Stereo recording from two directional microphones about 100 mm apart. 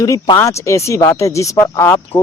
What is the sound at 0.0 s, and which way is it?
Speech, 40° left (ahead or behind).